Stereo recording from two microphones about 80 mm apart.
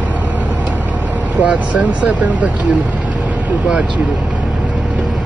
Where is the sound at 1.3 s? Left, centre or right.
Centre.